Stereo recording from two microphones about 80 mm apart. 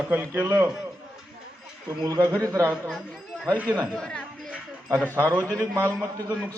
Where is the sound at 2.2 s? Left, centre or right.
Right.